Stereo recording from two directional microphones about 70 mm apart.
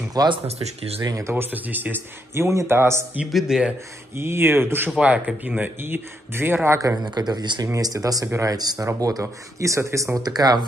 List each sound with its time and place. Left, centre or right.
0.2 s speech: right
1.0 s speech: right
1.3 s speech: right
2.3 s speech: right
3.3 s speech: centre
4.2 s speech: right
4.9 s speech: right
7.2 s speech: right
7.6 s speech: right
10.2 s speech: right